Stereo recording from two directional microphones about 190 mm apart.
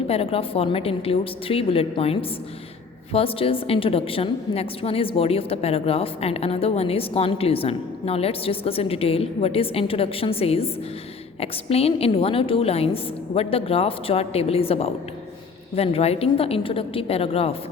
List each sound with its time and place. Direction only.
0.1 s a woman's voice: 30° left (ahead or behind)